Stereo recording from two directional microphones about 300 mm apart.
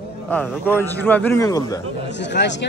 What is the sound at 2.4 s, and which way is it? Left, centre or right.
Speech, left.